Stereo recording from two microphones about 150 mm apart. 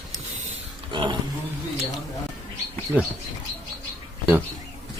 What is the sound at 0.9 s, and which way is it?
Roaring cats, 35° right (ahead or behind).